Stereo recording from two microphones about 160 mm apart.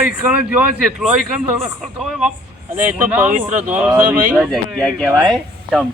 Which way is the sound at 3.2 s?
50° right (ahead or behind).